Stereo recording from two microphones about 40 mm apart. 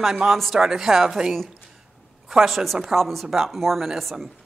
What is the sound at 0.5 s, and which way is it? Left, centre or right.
Speech, centre.